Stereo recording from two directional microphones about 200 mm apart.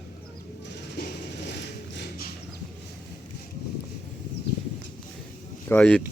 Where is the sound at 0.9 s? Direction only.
50° left (ahead or behind).